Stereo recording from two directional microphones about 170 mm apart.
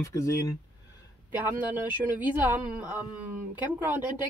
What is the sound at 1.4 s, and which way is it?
Speech, 10° right (ahead or behind).